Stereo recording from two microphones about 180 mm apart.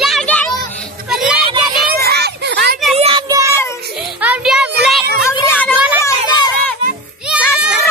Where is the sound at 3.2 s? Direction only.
20° right (ahead or behind).